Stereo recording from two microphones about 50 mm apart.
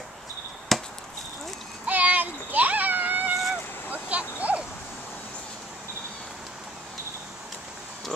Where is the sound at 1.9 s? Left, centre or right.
Right.